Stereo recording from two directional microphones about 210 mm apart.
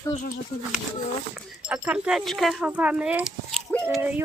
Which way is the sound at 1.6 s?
5° right (ahead or behind).